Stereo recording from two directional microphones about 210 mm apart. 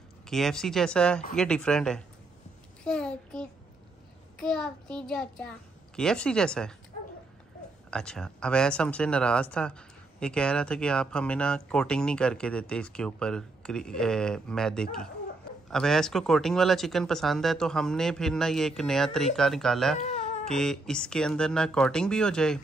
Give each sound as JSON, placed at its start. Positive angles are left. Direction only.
{"t": 0.3, "sound": "speech", "side_deg": 0}
{"t": 7.9, "sound": "speech", "side_deg": 5}
{"t": 20.0, "sound": "baby cry", "side_deg": 35}
{"t": 20.4, "sound": "speech", "side_deg": 0}